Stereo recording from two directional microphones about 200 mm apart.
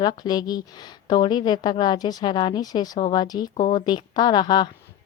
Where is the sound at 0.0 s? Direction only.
20° left (ahead or behind).